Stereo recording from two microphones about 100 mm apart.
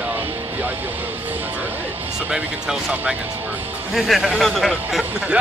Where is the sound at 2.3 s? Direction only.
10° right (ahead or behind).